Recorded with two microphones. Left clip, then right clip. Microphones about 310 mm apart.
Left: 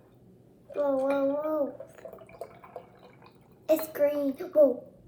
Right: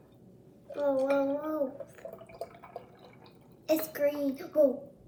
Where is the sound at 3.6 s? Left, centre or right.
Centre.